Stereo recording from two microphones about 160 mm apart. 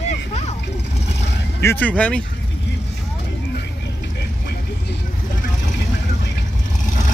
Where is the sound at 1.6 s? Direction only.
15° left (ahead or behind).